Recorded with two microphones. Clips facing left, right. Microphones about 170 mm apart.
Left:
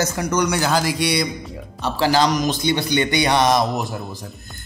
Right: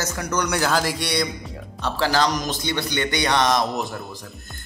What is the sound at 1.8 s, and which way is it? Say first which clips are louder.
A man's voice: left 3 dB; 15° left (ahead or behind).